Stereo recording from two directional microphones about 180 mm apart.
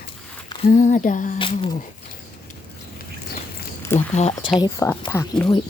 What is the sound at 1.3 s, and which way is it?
Speech, 30° left (ahead or behind).